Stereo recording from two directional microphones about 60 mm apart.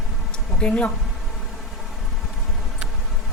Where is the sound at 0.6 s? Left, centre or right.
Centre.